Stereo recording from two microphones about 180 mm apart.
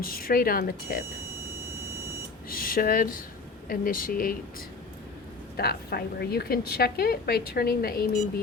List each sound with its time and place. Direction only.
0.0 s a woman's voice: 55° left (ahead or behind)
2.5 s speech: 55° left (ahead or behind)
5.5 s a woman's voice: 60° left (ahead or behind)